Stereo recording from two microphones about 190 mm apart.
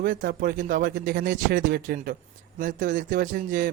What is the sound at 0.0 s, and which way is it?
Speech, 45° right (ahead or behind).